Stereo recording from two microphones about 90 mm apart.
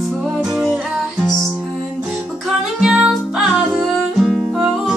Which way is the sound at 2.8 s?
10° right (ahead or behind).